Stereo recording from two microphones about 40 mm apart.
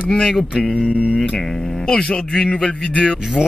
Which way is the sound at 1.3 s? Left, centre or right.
Centre.